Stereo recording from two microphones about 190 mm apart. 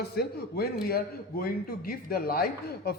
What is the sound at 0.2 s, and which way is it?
A man's voice, 55° left (ahead or behind).